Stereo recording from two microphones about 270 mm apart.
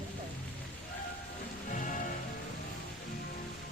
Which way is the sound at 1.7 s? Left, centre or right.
Left.